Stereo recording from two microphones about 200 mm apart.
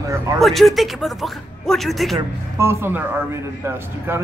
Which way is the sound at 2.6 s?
10° right (ahead or behind).